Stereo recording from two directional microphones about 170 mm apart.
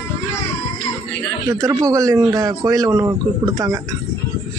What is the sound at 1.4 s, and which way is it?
A man's voice, 15° right (ahead or behind).